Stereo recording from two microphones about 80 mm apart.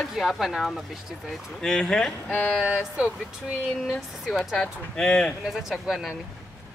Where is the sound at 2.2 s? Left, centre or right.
Left.